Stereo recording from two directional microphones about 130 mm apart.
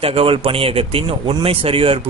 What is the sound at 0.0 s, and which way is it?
Speech, 45° right (ahead or behind).